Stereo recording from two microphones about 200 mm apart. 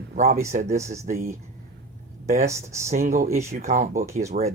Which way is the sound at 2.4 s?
15° right (ahead or behind).